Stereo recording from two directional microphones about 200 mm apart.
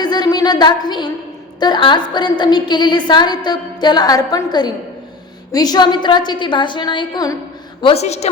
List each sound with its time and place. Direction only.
0.0 s a woman's voice: 20° left (ahead or behind)